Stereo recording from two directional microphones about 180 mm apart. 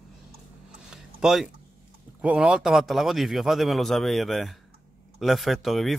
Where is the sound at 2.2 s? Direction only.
5° right (ahead or behind).